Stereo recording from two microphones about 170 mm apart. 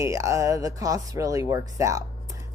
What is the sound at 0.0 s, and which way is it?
A woman's voice, 20° right (ahead or behind).